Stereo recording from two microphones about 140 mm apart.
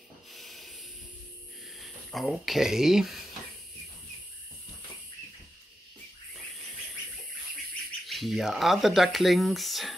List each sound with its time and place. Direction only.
0.3 s a sound: centre (ahead or behind)
1.8 s speech: centre (ahead or behind)
8.1 s speech: centre (ahead or behind)